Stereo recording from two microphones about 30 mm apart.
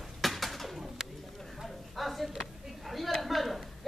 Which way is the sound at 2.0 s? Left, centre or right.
Centre.